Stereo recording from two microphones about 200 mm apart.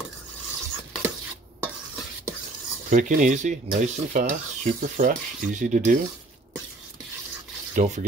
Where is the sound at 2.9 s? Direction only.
40° right (ahead or behind).